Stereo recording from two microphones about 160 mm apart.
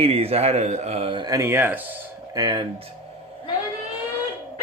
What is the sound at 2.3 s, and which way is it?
Speech, 25° right (ahead or behind).